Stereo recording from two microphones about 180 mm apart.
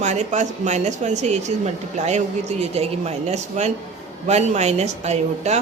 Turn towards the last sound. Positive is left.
turn(degrees=-35)  # may be behind; listen again after turning